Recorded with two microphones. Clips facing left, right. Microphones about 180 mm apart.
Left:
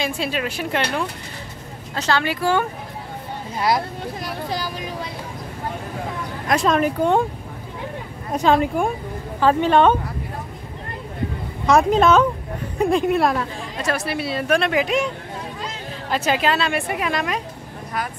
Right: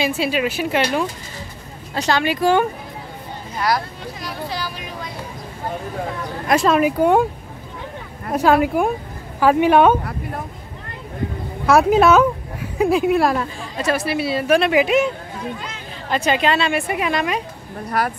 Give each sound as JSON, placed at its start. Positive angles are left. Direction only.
{"t": 0.0, "sound": "a woman's voice", "side_deg": -5}
{"t": 2.0, "sound": "speech", "side_deg": -15}
{"t": 4.5, "sound": "speech", "side_deg": 45}
{"t": 6.5, "sound": "speech", "side_deg": -5}
{"t": 8.3, "sound": "speech", "side_deg": -5}
{"t": 11.6, "sound": "a woman's voice", "side_deg": -5}
{"t": 16.1, "sound": "a woman's voice", "side_deg": 5}